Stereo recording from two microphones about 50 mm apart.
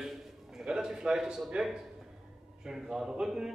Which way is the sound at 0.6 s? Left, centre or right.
Centre.